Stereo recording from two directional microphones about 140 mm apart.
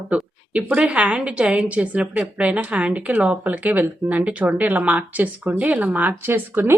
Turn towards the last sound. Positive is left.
turn(degrees=-15)  # may be behind; listen again after turning